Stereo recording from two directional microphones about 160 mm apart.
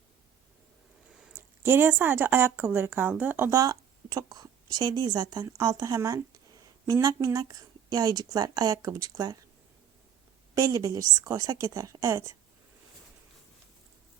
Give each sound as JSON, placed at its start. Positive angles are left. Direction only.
{"t": 1.2, "sound": "speech", "side_deg": -15}
{"t": 10.5, "sound": "a woman's voice", "side_deg": -20}